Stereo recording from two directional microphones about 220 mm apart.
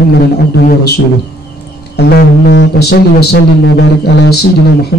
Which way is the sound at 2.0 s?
50° left (ahead or behind).